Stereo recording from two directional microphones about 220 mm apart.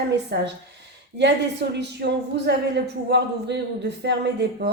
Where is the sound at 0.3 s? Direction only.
50° right (ahead or behind).